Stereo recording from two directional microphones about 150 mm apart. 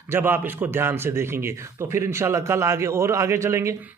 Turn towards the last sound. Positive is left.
turn(degrees=-20)  # may be behind; listen again after turning